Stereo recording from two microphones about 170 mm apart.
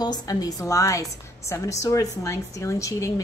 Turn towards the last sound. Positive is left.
turn(degrees=20)  # may be behind; listen again after turning